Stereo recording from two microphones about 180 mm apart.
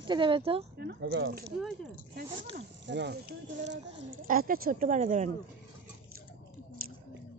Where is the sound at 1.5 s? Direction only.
Centre (ahead or behind).